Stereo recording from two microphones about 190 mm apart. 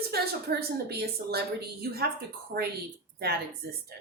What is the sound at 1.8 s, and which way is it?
Speech, 55° right (ahead or behind).